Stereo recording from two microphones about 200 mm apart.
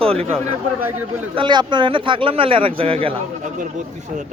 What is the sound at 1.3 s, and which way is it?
Speech, 25° right (ahead or behind).